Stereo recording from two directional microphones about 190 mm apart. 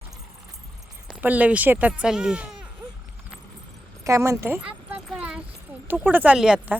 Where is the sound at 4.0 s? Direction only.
15° right (ahead or behind).